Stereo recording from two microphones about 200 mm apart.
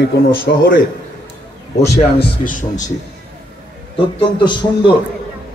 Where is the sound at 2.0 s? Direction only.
35° left (ahead or behind).